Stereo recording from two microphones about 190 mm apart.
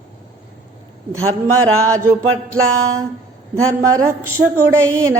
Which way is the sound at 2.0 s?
90° right.